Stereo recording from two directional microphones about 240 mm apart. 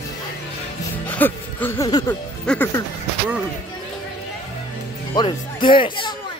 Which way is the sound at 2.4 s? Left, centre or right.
Centre.